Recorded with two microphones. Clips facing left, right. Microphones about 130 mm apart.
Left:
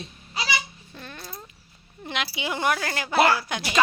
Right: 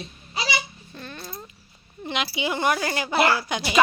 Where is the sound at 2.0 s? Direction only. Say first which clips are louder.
Right 3 dB; centre (ahead or behind).